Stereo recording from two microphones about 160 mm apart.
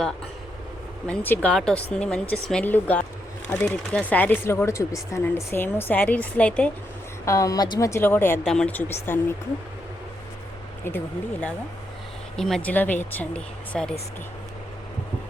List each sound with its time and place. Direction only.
1.0 s speech: 10° left (ahead or behind)
7.3 s a woman's voice: 20° left (ahead or behind)
10.8 s speech: 10° left (ahead or behind)